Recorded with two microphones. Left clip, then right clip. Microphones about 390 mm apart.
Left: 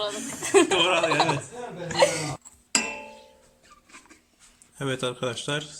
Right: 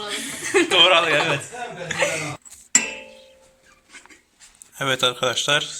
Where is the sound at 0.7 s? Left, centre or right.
Centre.